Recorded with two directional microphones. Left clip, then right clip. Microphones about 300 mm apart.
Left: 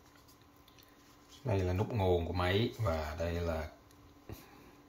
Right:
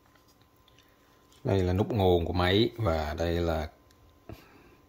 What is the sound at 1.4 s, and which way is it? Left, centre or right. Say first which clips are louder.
Speech: right 7 dB; right.